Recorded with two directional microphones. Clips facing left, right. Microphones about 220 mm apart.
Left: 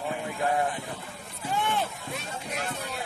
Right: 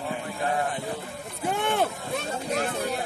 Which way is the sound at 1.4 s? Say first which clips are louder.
Right 3 dB; 55° right (ahead or behind).